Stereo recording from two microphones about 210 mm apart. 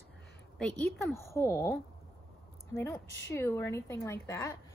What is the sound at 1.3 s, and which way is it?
A woman's voice, 15° left (ahead or behind).